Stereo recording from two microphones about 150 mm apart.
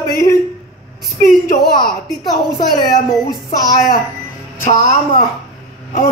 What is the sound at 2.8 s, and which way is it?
Speech, 25° left (ahead or behind).